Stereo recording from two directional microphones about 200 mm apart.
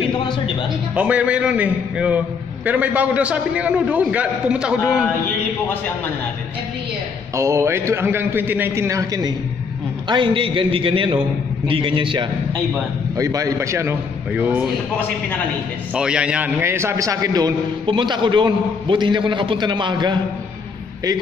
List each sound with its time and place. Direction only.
0.9 s a man's voice: 5° right (ahead or behind)
7.3 s a man's voice: 15° right (ahead or behind)
15.9 s a man's voice: 5° right (ahead or behind); by 20.2 s 20° right (ahead or behind)